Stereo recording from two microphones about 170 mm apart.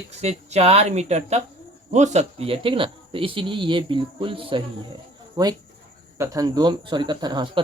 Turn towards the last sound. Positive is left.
turn(degrees=-30)  # may be behind; listen again after turning